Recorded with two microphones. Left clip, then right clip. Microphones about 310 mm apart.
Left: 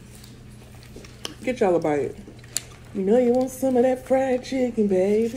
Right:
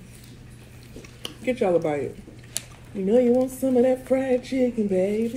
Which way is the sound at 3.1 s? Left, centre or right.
Centre.